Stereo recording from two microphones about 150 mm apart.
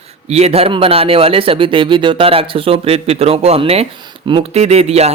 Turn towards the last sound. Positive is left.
turn(degrees=-45)  # may be behind; listen again after turning